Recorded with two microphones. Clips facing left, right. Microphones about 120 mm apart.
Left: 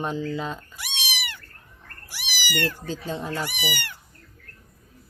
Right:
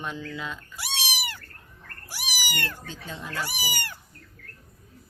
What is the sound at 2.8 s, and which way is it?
Speech, 35° left (ahead or behind).